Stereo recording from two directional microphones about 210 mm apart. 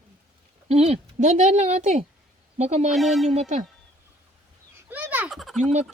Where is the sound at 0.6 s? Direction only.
30° right (ahead or behind).